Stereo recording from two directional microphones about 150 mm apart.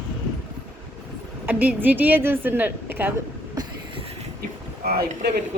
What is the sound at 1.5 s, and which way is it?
A woman's voice, 10° right (ahead or behind).